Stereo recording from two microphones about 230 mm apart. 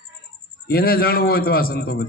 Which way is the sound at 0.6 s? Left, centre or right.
Left.